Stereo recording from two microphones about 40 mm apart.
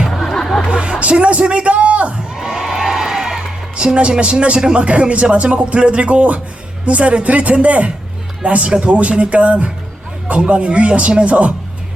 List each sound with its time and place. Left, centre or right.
0.1 s music: centre
0.7 s vehicle: right
1.2 s a sound: right
2.3 s music: centre
3.8 s a woman's voice: right